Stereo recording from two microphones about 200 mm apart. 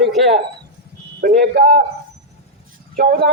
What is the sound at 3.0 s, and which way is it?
Speech, 50° right (ahead or behind).